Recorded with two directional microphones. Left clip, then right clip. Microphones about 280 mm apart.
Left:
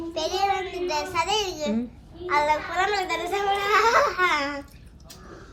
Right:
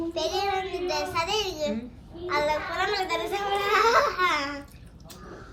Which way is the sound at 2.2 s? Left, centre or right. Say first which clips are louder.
Left 3 dB; left.